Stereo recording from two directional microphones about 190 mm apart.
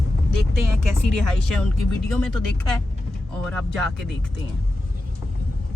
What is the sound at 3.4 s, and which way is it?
Speech, 5° left (ahead or behind).